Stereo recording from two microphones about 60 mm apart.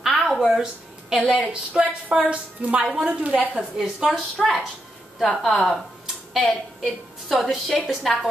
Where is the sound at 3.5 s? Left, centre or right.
Centre.